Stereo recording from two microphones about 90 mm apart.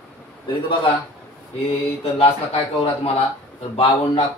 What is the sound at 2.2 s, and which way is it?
Speech, 90° left.